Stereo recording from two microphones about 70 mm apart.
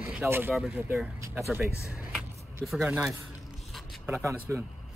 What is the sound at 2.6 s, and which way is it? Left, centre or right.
Speech, centre.